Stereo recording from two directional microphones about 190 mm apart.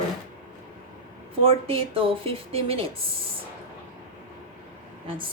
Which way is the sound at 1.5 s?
30° right (ahead or behind).